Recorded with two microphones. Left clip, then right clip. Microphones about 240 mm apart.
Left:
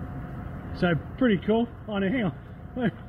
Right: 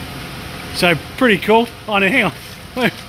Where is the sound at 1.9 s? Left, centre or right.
Right.